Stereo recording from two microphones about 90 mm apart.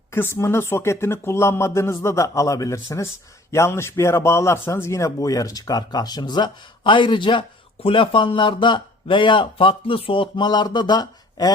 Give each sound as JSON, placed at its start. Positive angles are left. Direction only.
{"t": 0.1, "sound": "a man's voice", "side_deg": 25}